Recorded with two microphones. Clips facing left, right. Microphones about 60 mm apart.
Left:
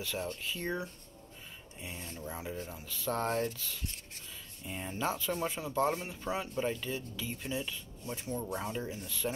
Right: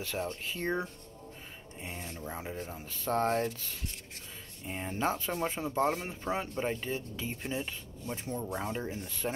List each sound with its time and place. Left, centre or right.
0.0 s speech: right